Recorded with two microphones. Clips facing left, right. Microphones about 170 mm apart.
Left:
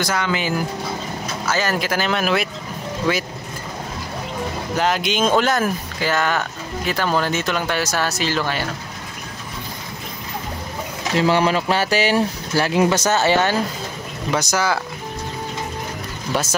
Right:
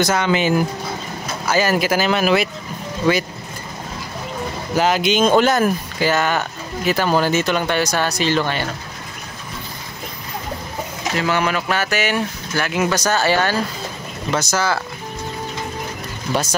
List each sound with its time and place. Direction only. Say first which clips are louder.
0.0 s speech: right 5 dB; 20° right (ahead or behind)
1.5 s speech: right 5 dB; 10° right (ahead or behind)
4.7 s speech: right 4 dB; centre (ahead or behind)
11.1 s speech: left 3 dB; 30° left (ahead or behind); by 14.8 s 15° left (ahead or behind)